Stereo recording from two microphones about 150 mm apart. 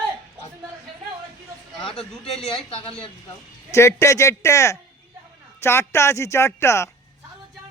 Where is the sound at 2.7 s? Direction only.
35° left (ahead or behind).